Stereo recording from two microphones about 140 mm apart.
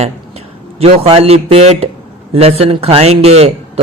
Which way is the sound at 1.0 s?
45° right (ahead or behind).